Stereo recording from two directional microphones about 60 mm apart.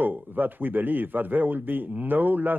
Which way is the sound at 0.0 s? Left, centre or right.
Right.